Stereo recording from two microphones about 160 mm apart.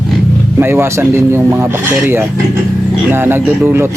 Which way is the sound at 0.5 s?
15° right (ahead or behind).